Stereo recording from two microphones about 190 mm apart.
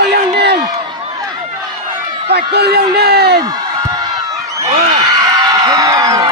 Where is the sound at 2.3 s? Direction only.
60° right (ahead or behind).